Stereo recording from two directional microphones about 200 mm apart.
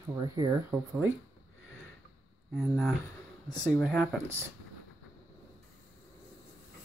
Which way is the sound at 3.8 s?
Centre (ahead or behind).